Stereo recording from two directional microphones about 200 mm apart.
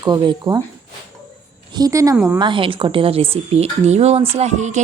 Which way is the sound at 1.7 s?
15° right (ahead or behind).